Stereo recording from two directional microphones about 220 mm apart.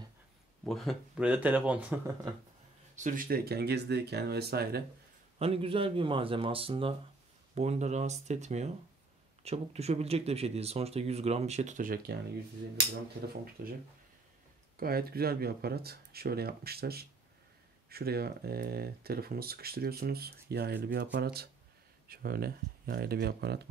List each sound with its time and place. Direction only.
0.7 s speech: centre (ahead or behind)
3.0 s speech: 40° right (ahead or behind)
5.4 s speech: 25° right (ahead or behind)
13.6 s speech: 40° right (ahead or behind)
14.8 s speech: 45° right (ahead or behind)